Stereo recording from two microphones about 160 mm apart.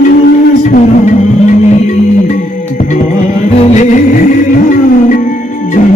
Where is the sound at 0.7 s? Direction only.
50° left (ahead or behind).